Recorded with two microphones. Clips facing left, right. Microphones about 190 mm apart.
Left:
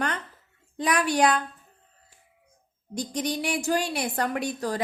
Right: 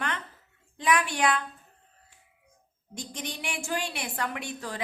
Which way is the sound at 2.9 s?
40° left (ahead or behind).